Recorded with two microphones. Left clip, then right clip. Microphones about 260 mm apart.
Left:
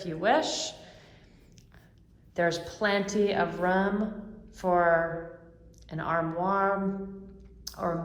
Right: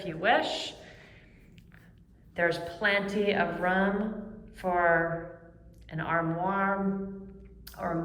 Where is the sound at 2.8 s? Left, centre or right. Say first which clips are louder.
Left 1 dB; centre.